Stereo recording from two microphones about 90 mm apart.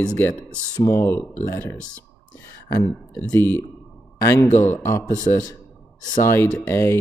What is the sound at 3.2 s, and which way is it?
Speech, 20° left (ahead or behind).